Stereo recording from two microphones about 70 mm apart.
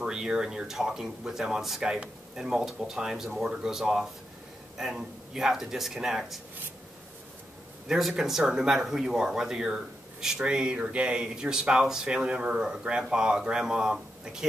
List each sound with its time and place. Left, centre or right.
0.0 s a man's voice: centre
7.9 s speech: centre